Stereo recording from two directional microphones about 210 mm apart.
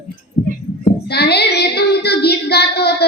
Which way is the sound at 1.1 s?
50° left (ahead or behind).